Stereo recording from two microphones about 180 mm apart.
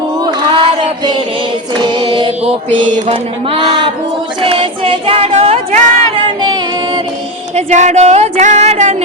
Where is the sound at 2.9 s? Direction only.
45° right (ahead or behind).